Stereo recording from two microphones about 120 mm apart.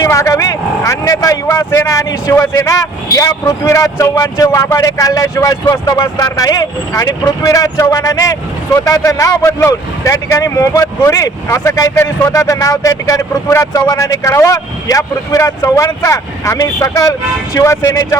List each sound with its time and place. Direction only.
0.0 s speech: 25° left (ahead or behind)